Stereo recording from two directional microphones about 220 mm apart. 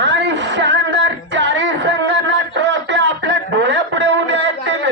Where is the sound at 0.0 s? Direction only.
55° right (ahead or behind).